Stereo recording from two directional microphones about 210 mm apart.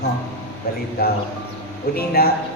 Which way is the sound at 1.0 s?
50° left (ahead or behind).